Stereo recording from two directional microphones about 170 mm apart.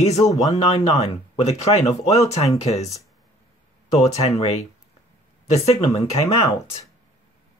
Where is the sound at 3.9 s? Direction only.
40° left (ahead or behind).